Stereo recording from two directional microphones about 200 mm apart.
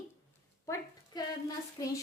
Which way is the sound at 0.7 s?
20° left (ahead or behind).